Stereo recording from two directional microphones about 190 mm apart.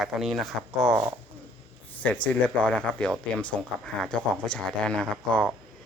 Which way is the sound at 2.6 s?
5° left (ahead or behind).